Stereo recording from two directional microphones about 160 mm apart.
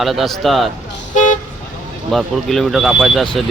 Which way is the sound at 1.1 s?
50° left (ahead or behind).